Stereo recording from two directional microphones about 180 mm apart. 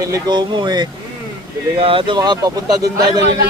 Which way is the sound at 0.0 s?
25° right (ahead or behind).